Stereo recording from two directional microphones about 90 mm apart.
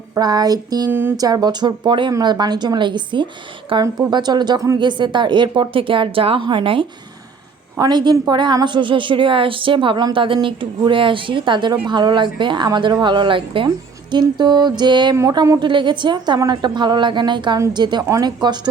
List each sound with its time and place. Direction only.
0.2 s speech: 50° right (ahead or behind)
0.9 s a sound: 25° right (ahead or behind)
1.1 s speech: 45° right (ahead or behind); by 3.2 s 60° right (ahead or behind)
3.7 s a woman's voice: 70° right (ahead or behind)
4.1 s a woman's voice: 55° right (ahead or behind); by 6.8 s 70° right (ahead or behind)
7.8 s a woman's voice: 55° right (ahead or behind)
12.6 s speech: 50° right (ahead or behind); by 13.7 s 70° right (ahead or behind)
14.1 s speech: 55° right (ahead or behind)